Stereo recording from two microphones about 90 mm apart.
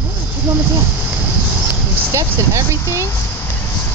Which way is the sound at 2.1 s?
30° right (ahead or behind).